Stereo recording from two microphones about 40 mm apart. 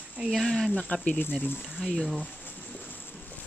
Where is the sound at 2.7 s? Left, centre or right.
Left.